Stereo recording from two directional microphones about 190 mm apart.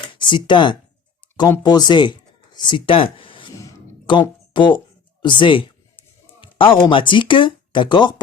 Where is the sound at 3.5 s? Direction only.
20° left (ahead or behind).